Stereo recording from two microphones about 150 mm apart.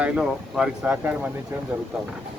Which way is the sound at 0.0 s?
5° right (ahead or behind).